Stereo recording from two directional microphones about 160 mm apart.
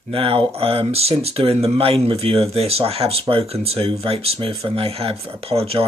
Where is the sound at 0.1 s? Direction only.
35° right (ahead or behind).